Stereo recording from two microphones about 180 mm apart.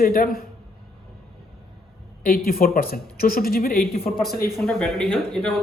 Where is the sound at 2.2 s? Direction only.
55° left (ahead or behind).